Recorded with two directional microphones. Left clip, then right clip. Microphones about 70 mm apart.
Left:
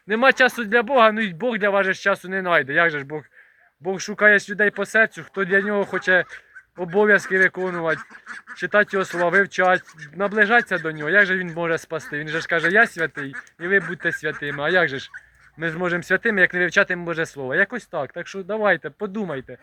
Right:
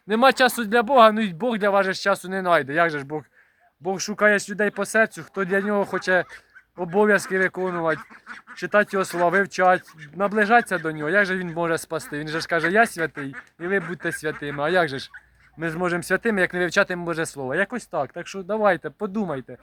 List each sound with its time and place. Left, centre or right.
0.1 s speech: right
6.8 s speech: centre
7.9 s speech: left
8.6 s speech: centre
11.4 s speech: right; by 18.4 s centre
18.4 s speech: right
18.9 s speech: right